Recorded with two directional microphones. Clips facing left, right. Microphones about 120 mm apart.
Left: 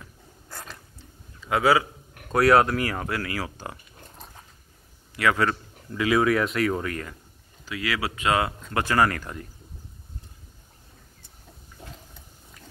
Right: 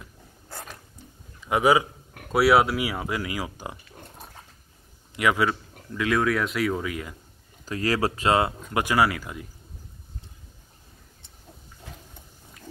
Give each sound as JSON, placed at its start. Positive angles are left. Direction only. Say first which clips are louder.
{"t": 1.4, "sound": "a man's voice", "louder": "right 1 dB", "side_deg": -20}
{"t": 2.3, "sound": "speech", "louder": "left 1 dB", "side_deg": -5}
{"t": 5.9, "sound": "speech", "louder": "left 2 dB", "side_deg": 0}
{"t": 7.6, "sound": "speech", "louder": "right 4 dB", "side_deg": -40}
{"t": 8.6, "sound": "speech", "louder": "even", "side_deg": -15}